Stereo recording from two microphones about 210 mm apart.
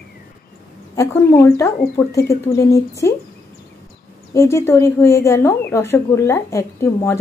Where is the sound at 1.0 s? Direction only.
10° left (ahead or behind).